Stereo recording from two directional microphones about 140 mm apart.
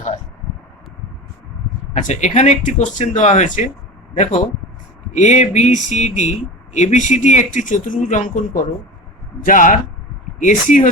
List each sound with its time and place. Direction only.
2.0 s speech: 65° left (ahead or behind)
5.1 s speech: 60° left (ahead or behind)